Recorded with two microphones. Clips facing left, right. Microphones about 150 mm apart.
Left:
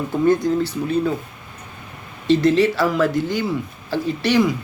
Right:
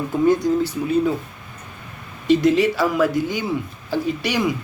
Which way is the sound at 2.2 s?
15° right (ahead or behind).